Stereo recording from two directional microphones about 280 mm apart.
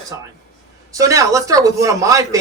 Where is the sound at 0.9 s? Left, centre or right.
Centre.